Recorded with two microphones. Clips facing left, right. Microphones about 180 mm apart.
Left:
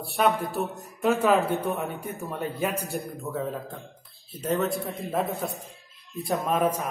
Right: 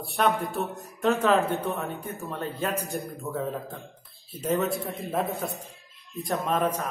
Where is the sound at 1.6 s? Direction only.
15° left (ahead or behind).